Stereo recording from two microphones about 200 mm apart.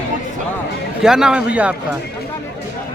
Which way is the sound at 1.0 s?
5° right (ahead or behind).